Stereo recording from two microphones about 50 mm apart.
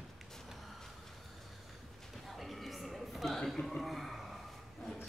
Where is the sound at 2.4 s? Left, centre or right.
Centre.